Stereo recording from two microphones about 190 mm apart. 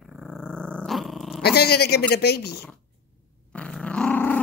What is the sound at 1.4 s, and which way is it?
Speech, 55° left (ahead or behind).